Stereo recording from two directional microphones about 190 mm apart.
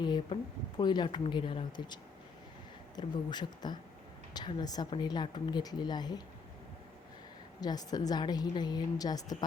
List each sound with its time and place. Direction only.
0.0 s a sound: 25° left (ahead or behind)
0.8 s speech: 25° left (ahead or behind)
7.6 s speech: 20° left (ahead or behind)